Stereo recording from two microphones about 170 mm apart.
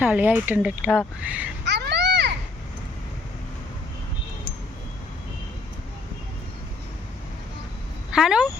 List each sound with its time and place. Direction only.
0.0 s speech: 10° right (ahead or behind)
1.6 s children playing: 85° right
8.1 s speech: 5° right (ahead or behind)